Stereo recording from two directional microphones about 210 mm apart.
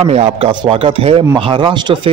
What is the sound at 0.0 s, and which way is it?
Speech, 30° right (ahead or behind).